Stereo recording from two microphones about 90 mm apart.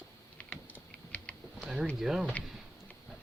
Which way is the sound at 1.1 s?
15° left (ahead or behind).